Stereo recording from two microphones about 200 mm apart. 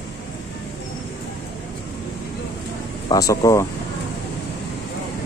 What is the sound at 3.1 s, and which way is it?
Speech, 15° left (ahead or behind).